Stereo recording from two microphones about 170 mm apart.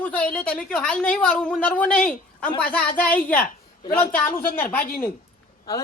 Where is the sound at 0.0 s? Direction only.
10° left (ahead or behind).